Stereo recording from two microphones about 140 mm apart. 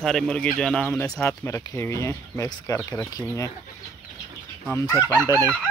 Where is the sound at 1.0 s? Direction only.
25° left (ahead or behind).